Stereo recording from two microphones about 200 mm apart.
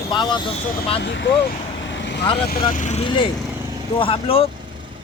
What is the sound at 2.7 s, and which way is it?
Speech, 40° left (ahead or behind).